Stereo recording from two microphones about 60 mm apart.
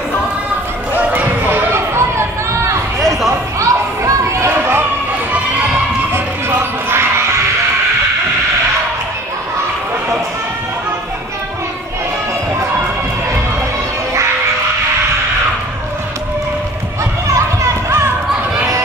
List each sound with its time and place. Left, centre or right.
0.9 s a sound: right
1.7 s chatter: right
3.3 s chatter: right
4.5 s a sound: right
6.1 s music: right
17.3 s children playing: right